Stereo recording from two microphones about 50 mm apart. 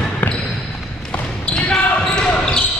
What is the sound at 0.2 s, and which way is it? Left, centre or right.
Basketball bounce, left.